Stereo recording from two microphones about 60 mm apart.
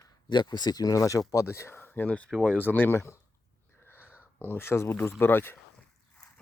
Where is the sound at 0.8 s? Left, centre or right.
Left.